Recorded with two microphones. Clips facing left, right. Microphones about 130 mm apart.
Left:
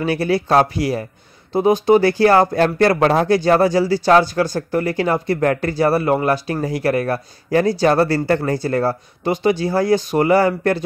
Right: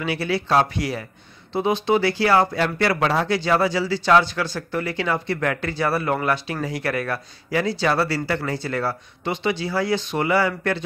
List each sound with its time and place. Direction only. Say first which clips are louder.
0.0 s speech: left 6 dB; 45° left (ahead or behind)